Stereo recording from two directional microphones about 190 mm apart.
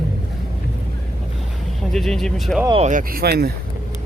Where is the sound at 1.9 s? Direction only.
Centre (ahead or behind).